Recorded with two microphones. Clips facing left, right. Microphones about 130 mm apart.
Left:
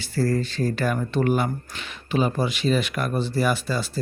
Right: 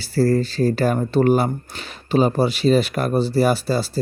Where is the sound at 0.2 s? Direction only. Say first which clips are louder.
Right 6 dB; 35° right (ahead or behind).